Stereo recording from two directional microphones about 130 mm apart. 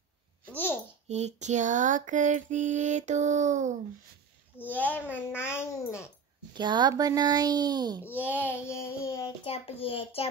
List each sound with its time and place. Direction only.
1.0 s female singing: 60° right (ahead or behind)
4.6 s a child's voice: 15° left (ahead or behind)
6.5 s a child's voice: 35° right (ahead or behind)
8.0 s a child's voice: 15° left (ahead or behind)
9.4 s a child's voice: 50° left (ahead or behind)